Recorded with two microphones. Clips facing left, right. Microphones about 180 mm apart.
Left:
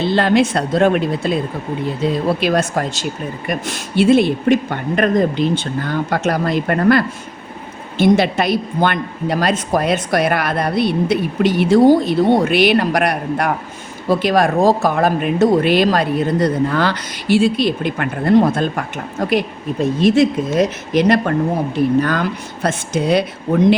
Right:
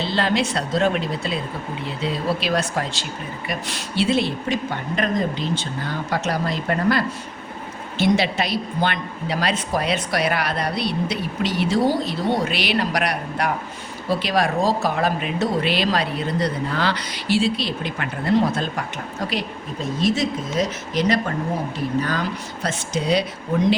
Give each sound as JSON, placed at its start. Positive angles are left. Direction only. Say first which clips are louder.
{"t": 0.0, "sound": "a woman's voice", "louder": "left 7 dB", "side_deg": 55}